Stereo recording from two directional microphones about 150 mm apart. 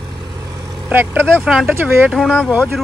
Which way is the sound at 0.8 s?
15° right (ahead or behind).